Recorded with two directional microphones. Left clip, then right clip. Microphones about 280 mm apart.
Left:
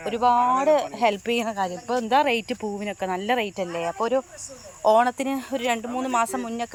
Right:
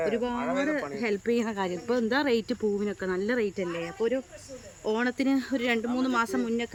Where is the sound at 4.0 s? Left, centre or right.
Left.